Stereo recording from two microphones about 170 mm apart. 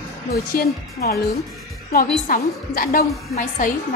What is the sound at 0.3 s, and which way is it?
A woman's voice, 65° left (ahead or behind).